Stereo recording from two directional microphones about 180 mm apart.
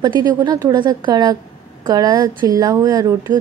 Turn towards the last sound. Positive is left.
turn(degrees=-20)  # may be behind; listen again after turning